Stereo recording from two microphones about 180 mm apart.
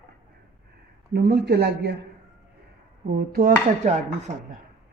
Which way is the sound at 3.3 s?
50° right (ahead or behind).